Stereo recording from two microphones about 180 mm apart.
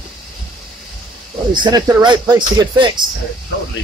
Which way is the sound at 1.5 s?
25° right (ahead or behind).